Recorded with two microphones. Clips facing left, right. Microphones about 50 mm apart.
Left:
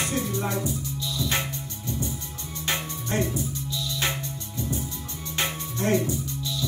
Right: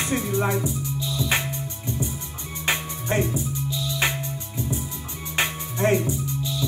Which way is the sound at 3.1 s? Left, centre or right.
Right.